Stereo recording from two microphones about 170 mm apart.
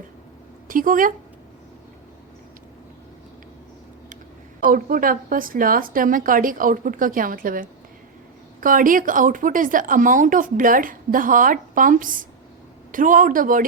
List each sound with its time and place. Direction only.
0.7 s a woman's voice: 55° right (ahead or behind)
4.7 s a woman's voice: 55° right (ahead or behind)